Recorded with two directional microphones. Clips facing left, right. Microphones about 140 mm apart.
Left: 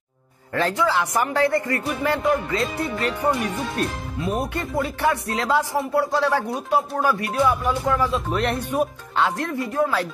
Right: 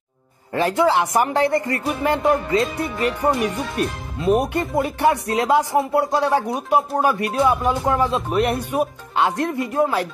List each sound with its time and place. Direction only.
0.6 s speech: 15° right (ahead or behind)
3.8 s speech: 10° right (ahead or behind)
4.2 s speech: 20° right (ahead or behind)
8.3 s speech: 10° right (ahead or behind)